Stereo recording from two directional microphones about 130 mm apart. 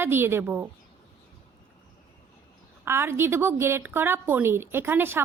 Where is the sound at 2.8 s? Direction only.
20° right (ahead or behind).